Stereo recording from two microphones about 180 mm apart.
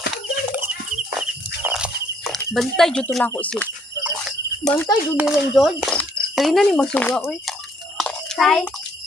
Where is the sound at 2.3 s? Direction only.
Centre (ahead or behind).